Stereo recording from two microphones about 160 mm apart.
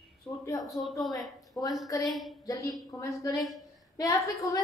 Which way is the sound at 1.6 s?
15° left (ahead or behind).